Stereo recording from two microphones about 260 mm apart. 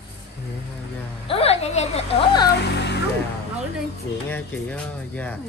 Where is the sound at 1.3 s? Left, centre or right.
Left.